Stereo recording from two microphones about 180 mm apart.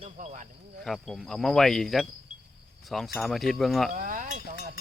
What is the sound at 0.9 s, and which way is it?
Speech, centre (ahead or behind).